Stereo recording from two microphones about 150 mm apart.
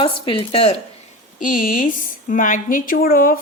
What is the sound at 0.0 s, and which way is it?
Speech, 35° left (ahead or behind).